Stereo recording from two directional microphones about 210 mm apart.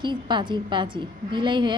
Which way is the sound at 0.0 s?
20° right (ahead or behind).